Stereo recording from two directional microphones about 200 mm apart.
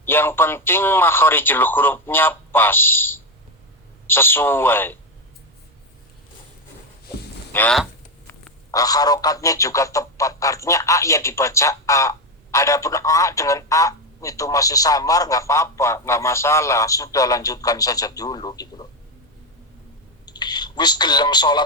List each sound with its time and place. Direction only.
0.0 s speech: 10° left (ahead or behind)
7.5 s speech: 10° left (ahead or behind)
20.2 s speech: 20° left (ahead or behind)